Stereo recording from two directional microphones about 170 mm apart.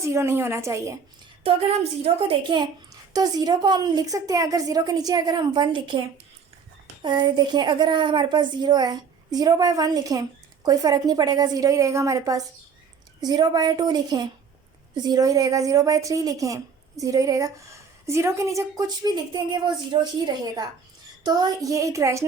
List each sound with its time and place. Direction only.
0.0 s a woman's voice: 15° right (ahead or behind)
2.1 s a woman's voice: 35° right (ahead or behind)
7.0 s a woman's voice: 25° right (ahead or behind)